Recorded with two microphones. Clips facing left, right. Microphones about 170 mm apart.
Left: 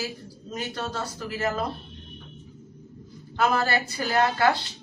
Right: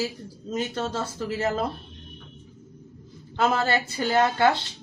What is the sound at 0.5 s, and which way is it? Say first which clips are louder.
Speech: right 4 dB; 25° right (ahead or behind).